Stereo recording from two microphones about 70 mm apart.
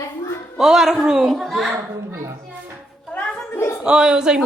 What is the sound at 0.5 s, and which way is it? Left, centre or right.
A woman's voice, centre.